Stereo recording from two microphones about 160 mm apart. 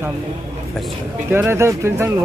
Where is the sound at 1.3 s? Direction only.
15° right (ahead or behind).